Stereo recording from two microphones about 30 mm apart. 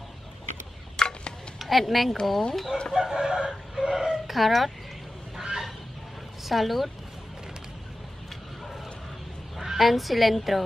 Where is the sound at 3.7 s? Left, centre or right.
Centre.